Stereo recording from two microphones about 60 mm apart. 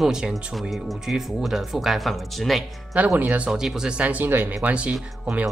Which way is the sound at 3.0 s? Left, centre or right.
Right.